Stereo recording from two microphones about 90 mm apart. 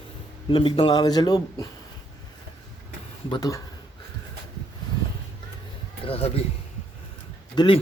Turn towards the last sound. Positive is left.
turn(degrees=65)  # may be behind; listen again after turning